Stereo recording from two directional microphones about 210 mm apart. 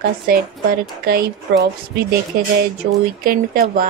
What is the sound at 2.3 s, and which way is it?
A woman's voice, 45° right (ahead or behind).